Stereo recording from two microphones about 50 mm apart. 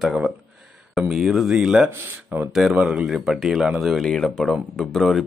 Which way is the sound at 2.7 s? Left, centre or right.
Centre.